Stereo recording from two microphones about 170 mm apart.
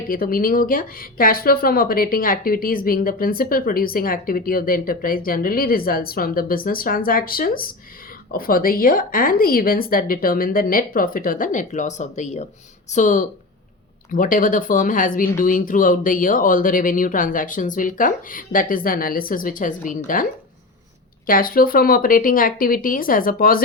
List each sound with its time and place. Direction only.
0.1 s speech: 55° left (ahead or behind)
21.2 s speech: 55° left (ahead or behind)